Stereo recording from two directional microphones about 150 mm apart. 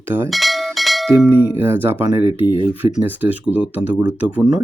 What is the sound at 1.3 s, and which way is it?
Speech, 15° right (ahead or behind).